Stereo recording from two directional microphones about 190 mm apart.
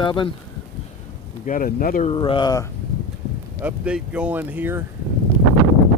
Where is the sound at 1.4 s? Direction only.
45° left (ahead or behind).